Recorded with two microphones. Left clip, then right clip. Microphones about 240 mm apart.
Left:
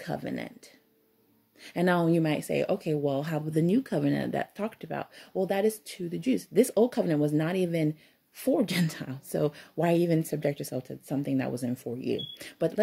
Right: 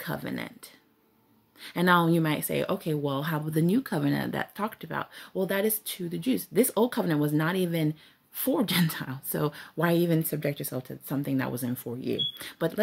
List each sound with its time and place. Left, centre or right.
0.0 s speech: centre